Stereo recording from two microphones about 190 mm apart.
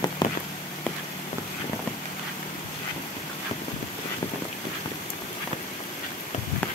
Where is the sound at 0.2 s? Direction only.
25° left (ahead or behind).